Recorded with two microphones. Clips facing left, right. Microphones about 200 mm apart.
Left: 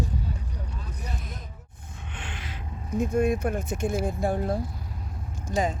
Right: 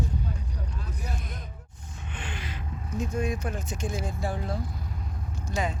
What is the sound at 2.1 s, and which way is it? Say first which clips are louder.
Gasp: right 2 dB; centre (ahead or behind).